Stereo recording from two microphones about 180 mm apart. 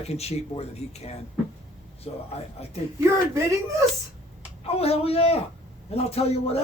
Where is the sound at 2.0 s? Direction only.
35° left (ahead or behind).